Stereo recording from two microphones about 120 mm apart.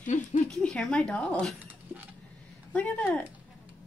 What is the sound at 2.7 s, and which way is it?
Speech, 10° left (ahead or behind).